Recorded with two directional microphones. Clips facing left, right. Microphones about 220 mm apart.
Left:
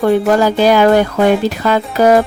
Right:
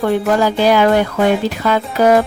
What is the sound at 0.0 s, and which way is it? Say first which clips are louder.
Speech: left 3 dB; 45° left (ahead or behind).